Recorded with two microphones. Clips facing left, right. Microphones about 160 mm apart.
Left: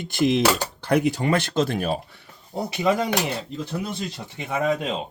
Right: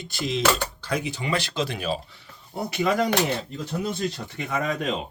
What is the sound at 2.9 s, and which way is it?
Speech, 5° left (ahead or behind).